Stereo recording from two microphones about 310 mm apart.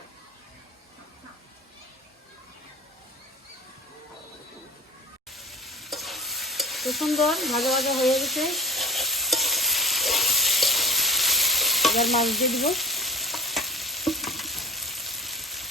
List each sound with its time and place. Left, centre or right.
5.3 s stir: centre